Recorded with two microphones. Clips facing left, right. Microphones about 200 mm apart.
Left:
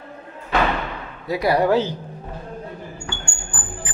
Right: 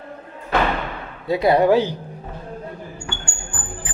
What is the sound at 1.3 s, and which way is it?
Speech, 25° right (ahead or behind).